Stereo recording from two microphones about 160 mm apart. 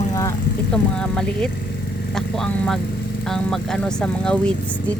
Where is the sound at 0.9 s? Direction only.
5° left (ahead or behind).